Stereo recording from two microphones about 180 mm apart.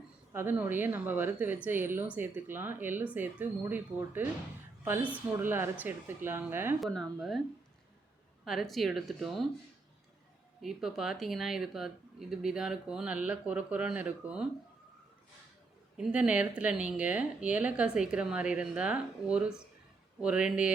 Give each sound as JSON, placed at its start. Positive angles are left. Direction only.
{"t": 0.3, "sound": "a woman's voice", "side_deg": -10}
{"t": 6.7, "sound": "speech", "side_deg": 0}
{"t": 8.4, "sound": "speech", "side_deg": 0}
{"t": 10.6, "sound": "speech", "side_deg": 0}
{"t": 16.0, "sound": "speech", "side_deg": -5}